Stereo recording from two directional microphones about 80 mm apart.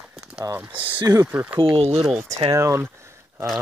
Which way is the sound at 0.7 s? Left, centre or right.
Right.